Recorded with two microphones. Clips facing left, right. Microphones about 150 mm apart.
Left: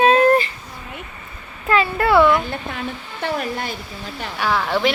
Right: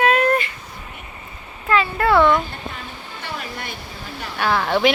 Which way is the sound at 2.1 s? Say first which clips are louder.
Left 1 dB; 5° left (ahead or behind).